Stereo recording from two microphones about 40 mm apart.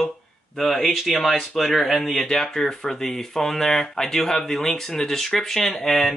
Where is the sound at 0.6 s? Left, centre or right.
Centre.